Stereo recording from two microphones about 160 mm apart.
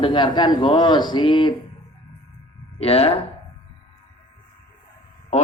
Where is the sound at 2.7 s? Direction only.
40° left (ahead or behind).